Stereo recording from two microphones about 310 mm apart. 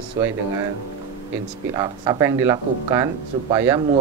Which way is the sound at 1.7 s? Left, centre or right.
Centre.